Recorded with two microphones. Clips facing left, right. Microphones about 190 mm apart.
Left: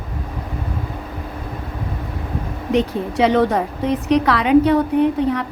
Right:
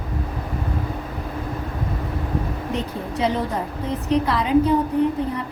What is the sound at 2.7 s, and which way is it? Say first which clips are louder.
A woman's voice: left 11 dB; 75° left (ahead or behind).